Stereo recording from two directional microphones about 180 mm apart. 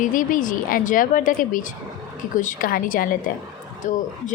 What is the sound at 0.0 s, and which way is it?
Speech, 50° left (ahead or behind).